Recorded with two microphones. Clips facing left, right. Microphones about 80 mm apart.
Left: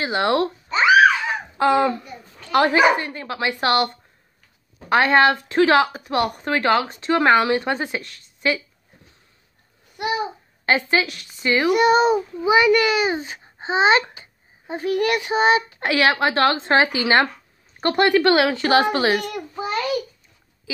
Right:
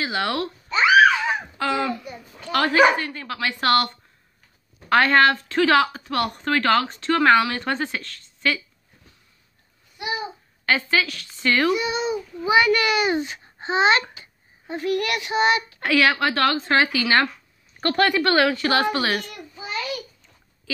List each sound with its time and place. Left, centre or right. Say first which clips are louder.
0.0 s a child's voice: left 5 dB; left
10.0 s babbling: left 5 dB; left
10.9 s speech: left 2 dB; left
11.7 s a child's voice: left 8 dB; left
12.4 s a child's voice: left 1 dB; centre
13.1 s a child's voice: right 2 dB; left
19.2 s a child's voice: left 9 dB; left